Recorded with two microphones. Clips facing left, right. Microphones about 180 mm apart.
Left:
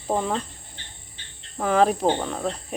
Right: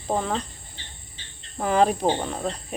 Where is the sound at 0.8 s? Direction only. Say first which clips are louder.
Right 2 dB; 55° left (ahead or behind).